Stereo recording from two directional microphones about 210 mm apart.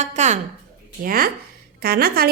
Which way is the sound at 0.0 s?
35° right (ahead or behind).